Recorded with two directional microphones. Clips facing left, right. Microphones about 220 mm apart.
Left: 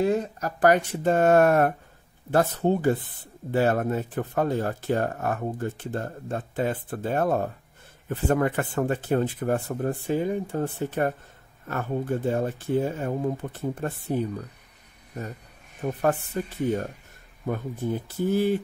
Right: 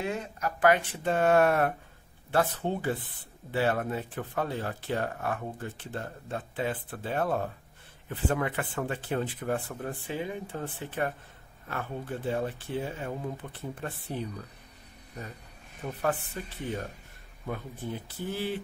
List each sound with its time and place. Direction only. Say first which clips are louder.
0.0 s speech: left 8 dB; 40° left (ahead or behind)
15.8 s speech: left 6 dB; 45° left (ahead or behind)